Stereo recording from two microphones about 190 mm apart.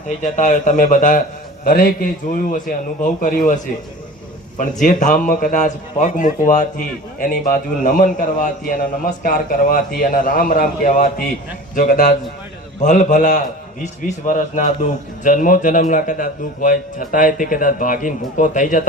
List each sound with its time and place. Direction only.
0.2 s a man's voice: 40° left (ahead or behind)
4.8 s a man's voice: 40° left (ahead or behind)